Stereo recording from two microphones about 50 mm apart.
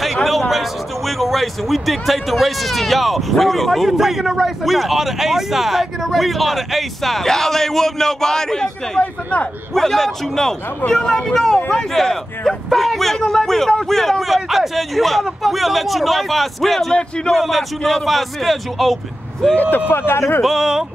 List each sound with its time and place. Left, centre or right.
0.0 s speech: centre
9.0 s speech: left
9.8 s a man's voice: centre
19.9 s speech: left
20.4 s speech: centre